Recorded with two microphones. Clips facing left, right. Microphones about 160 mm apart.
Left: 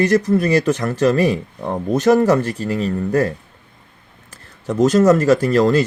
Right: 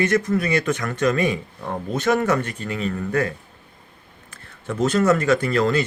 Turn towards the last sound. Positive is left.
turn(degrees=40)  # may be behind; listen again after turning